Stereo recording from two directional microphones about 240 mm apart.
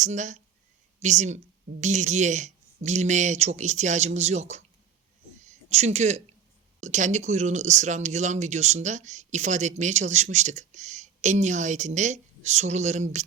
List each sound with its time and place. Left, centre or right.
0.0 s speech: right